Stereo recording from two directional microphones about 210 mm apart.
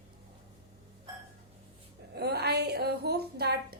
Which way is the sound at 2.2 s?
50° right (ahead or behind).